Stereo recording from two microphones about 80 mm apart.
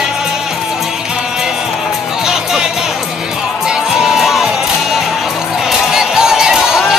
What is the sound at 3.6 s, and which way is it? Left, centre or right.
Music, centre.